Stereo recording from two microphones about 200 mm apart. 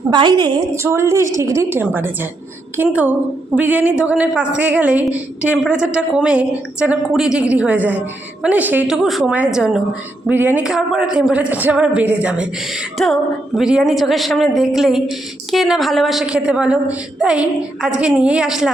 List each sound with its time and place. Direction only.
0.1 s a woman's voice: 20° right (ahead or behind); by 18.7 s centre (ahead or behind)